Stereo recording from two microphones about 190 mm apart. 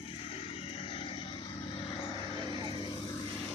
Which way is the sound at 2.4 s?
25° right (ahead or behind).